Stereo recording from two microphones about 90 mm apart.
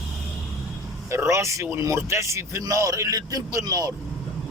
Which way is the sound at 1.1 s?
30° right (ahead or behind).